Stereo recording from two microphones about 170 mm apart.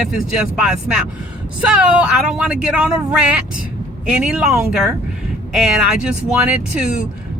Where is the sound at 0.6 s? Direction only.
5° right (ahead or behind).